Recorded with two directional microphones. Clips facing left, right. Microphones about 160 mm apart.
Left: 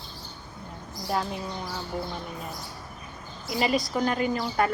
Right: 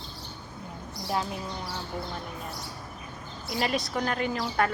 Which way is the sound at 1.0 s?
Centre (ahead or behind).